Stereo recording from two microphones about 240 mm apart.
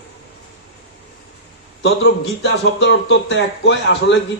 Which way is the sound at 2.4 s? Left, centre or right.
Left.